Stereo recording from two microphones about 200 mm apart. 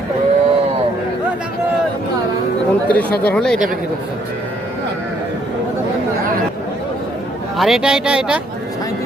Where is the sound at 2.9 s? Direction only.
5° left (ahead or behind).